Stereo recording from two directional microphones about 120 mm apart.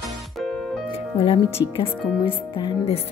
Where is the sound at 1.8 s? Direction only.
50° left (ahead or behind).